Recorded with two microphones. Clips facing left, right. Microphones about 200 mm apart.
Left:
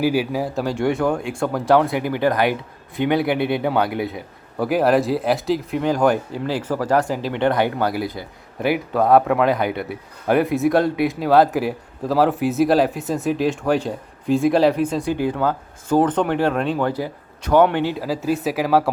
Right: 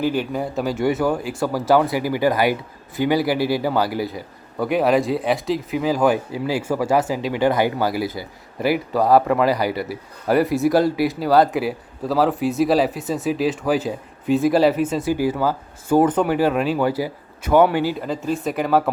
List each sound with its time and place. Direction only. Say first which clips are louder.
0.0 s speech: left 2 dB; 5° left (ahead or behind)